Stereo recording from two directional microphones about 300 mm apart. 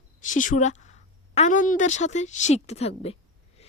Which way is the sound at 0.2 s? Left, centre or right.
Left.